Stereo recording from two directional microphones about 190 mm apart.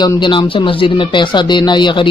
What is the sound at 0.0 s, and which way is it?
Speech, 25° left (ahead or behind).